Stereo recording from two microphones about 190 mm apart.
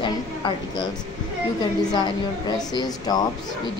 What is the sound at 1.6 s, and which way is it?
A woman's voice, 20° left (ahead or behind).